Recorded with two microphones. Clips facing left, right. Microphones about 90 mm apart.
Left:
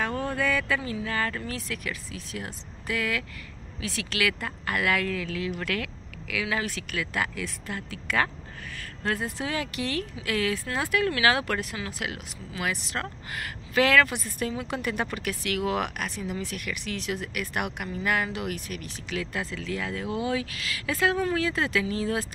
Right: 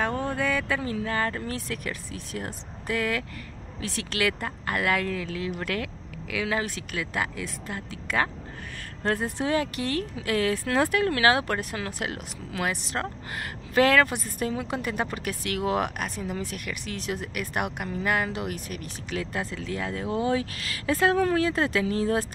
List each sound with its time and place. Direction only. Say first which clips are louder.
0.0 s a sound: right 1 dB; 20° right (ahead or behind)
1.0 s speech: right 2 dB; 30° right (ahead or behind)
11.7 s speech: right 2 dB; 40° right (ahead or behind)